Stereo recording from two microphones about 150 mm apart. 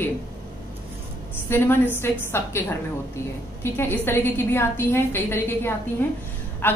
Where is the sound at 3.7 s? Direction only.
15° left (ahead or behind).